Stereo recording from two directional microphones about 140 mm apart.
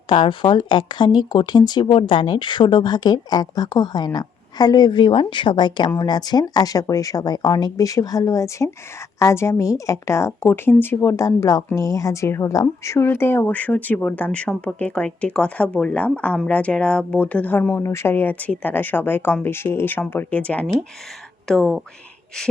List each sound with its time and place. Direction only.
0.1 s a woman's voice: 35° left (ahead or behind); by 21.8 s 5° left (ahead or behind)